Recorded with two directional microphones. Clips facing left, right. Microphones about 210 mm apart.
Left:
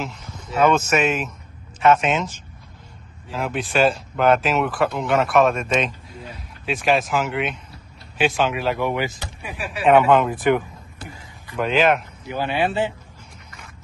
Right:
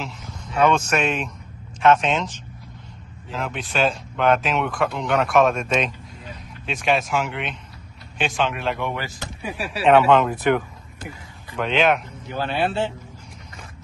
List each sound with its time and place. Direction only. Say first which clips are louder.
0.0 s speech: left 2 dB; 5° left (ahead or behind)
9.2 s speech: right 2 dB; 35° right (ahead or behind)
9.8 s speech: even; 10° left (ahead or behind)
11.5 s speech: left 1 dB; 5° left (ahead or behind)